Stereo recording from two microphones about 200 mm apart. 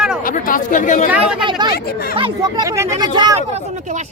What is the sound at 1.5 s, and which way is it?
Speech, 25° right (ahead or behind).